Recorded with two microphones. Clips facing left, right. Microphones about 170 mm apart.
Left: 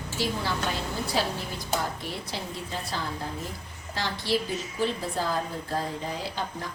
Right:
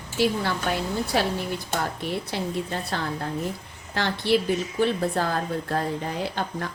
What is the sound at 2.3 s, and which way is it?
Speech, 60° right (ahead or behind).